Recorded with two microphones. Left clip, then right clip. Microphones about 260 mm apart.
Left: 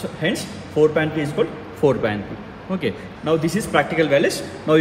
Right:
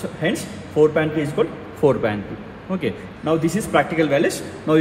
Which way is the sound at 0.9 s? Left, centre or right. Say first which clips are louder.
Right 1 dB; right.